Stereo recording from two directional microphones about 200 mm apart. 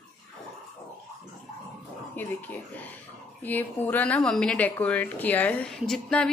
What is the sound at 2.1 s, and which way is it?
Speech, 10° left (ahead or behind).